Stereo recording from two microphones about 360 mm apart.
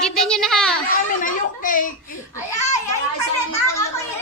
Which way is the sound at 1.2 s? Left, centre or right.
Left.